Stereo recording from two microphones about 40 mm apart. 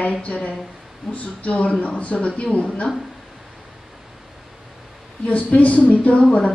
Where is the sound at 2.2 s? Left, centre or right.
Left.